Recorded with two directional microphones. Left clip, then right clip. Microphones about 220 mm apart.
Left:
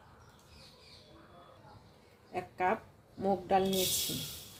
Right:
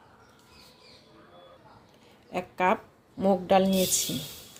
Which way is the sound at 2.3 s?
40° right (ahead or behind).